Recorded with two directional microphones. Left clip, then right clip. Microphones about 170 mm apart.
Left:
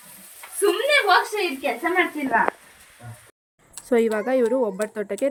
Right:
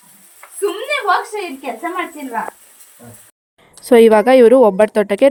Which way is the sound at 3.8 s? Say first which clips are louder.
Right 12 dB; 50° right (ahead or behind).